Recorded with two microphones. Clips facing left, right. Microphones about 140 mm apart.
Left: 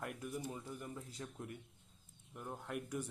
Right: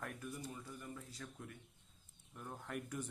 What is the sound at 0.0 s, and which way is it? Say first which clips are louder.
Speech: left 3 dB; 15° left (ahead or behind).